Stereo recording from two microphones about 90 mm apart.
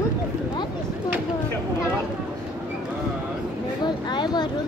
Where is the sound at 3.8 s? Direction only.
55° left (ahead or behind).